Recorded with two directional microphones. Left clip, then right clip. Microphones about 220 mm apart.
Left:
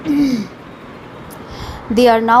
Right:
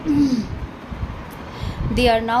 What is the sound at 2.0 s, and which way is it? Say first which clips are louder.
Speech: left 7 dB; 25° left (ahead or behind).